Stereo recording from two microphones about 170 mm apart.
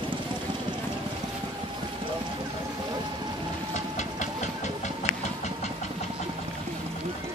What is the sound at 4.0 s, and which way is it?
Vehicle, 45° left (ahead or behind).